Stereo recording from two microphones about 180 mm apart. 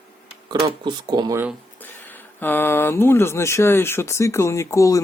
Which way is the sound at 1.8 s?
10° left (ahead or behind).